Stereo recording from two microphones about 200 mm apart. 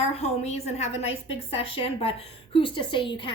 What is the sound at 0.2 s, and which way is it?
A woman's voice, 35° left (ahead or behind).